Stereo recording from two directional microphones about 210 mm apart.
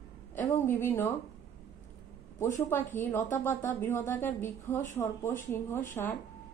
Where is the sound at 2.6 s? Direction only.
10° left (ahead or behind).